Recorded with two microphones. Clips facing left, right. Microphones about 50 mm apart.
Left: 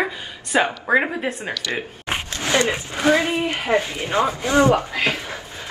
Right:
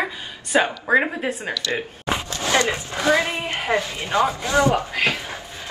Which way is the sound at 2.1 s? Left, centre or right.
Left.